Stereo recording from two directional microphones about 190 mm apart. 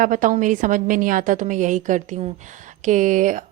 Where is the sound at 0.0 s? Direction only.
45° right (ahead or behind).